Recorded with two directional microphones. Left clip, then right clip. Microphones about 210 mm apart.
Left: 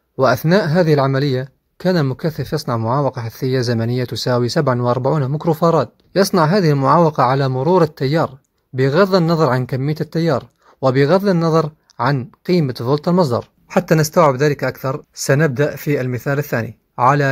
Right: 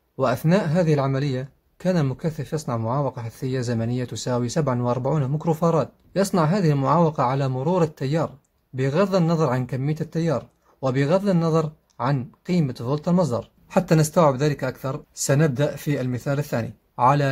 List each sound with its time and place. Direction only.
0.2 s speech: 30° left (ahead or behind)